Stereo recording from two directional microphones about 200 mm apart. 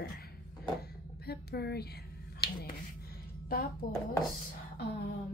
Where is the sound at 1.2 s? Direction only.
55° left (ahead or behind).